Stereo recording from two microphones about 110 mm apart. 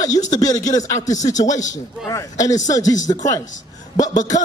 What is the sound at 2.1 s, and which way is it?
Speech, 30° left (ahead or behind).